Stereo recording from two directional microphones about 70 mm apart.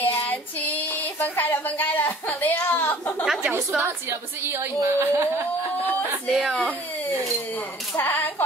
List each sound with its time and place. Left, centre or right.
0.0 s child singing: left
3.7 s a woman's voice: right
6.2 s speech: centre
7.9 s speech: left